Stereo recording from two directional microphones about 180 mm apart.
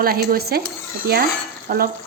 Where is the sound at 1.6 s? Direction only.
55° right (ahead or behind).